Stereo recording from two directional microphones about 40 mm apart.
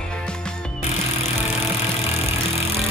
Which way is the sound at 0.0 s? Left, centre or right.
Left.